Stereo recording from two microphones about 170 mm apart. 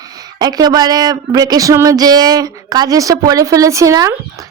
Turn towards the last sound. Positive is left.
turn(degrees=-20)  # may be behind; listen again after turning